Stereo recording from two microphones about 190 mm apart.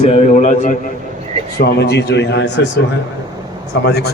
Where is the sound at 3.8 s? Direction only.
60° left (ahead or behind).